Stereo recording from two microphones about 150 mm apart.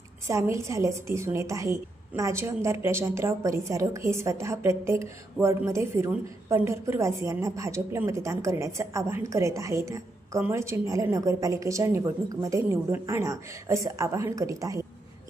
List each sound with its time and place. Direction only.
0.3 s a woman's voice: 20° right (ahead or behind)